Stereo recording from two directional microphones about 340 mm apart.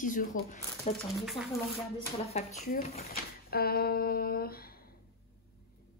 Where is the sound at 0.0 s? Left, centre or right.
Left.